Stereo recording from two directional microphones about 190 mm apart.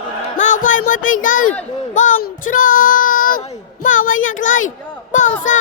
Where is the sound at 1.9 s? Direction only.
45° left (ahead or behind).